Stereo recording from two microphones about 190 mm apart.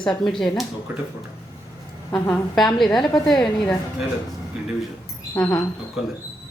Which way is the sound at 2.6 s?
Centre (ahead or behind).